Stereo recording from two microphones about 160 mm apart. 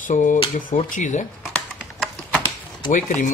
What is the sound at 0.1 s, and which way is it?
Speech, 55° left (ahead or behind).